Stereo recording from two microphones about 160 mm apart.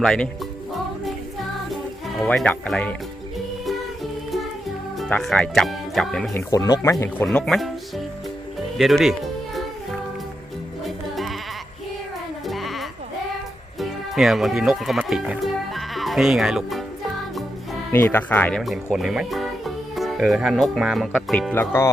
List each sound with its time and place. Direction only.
0.0 s speech: 5° left (ahead or behind)
1.7 s music: centre (ahead or behind)
4.9 s speech: 5° left (ahead or behind)
6.3 s speech: 20° left (ahead or behind)
7.3 s speech: centre (ahead or behind)
10.8 s music: centre (ahead or behind)
12.5 s music: centre (ahead or behind)
13.7 s speech: centre (ahead or behind)
17.9 s speech: 10° left (ahead or behind)
21.5 s speech: 15° left (ahead or behind)